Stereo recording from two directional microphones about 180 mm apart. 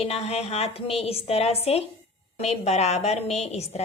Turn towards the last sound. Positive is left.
turn(degrees=35)  # may be behind; listen again after turning